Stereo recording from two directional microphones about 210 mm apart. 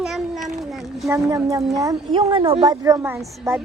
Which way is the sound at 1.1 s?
15° right (ahead or behind).